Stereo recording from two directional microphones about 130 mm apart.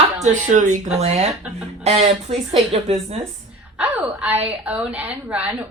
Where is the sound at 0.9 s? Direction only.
55° right (ahead or behind).